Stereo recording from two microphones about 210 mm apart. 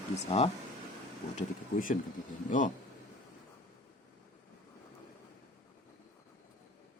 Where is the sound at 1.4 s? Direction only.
40° left (ahead or behind).